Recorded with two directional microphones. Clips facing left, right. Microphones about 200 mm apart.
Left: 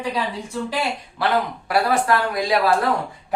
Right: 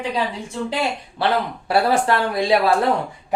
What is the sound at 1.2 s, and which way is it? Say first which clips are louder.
Speech: right 1 dB; 30° right (ahead or behind).